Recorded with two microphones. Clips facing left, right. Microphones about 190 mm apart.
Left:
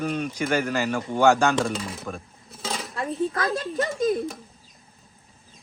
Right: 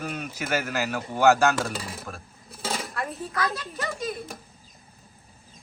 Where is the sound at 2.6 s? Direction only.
5° right (ahead or behind).